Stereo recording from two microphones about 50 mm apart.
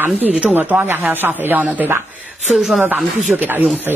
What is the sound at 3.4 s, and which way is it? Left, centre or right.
Speech, right.